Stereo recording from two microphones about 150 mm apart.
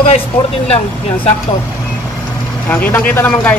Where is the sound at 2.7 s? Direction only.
10° left (ahead or behind).